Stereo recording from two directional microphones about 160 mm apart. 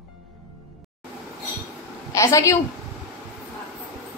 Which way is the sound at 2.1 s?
20° left (ahead or behind).